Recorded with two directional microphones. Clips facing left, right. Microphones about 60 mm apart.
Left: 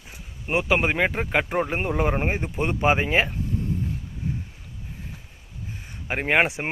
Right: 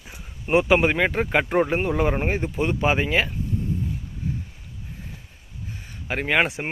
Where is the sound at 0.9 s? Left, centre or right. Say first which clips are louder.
Right 1 dB; centre.